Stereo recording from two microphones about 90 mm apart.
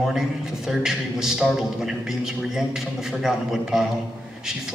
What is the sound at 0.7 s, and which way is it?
A man's voice, 5° right (ahead or behind).